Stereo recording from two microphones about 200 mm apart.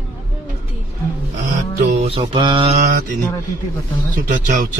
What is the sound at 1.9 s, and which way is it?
Mantra, 30° right (ahead or behind).